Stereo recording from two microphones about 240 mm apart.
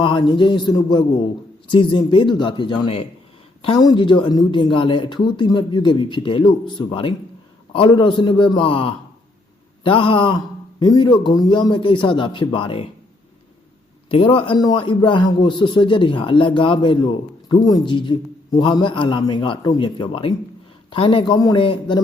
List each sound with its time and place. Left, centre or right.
0.0 s a man's voice: centre
14.1 s a man's voice: left